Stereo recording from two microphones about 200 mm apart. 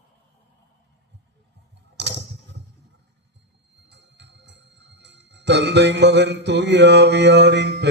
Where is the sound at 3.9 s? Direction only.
60° right (ahead or behind).